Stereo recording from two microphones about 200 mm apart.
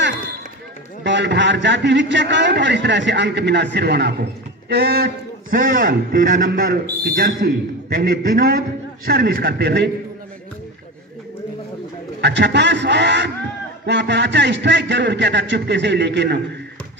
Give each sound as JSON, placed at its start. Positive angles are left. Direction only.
{"t": 1.0, "sound": "a man's voice", "side_deg": -60}
{"t": 12.2, "sound": "a man's voice", "side_deg": -60}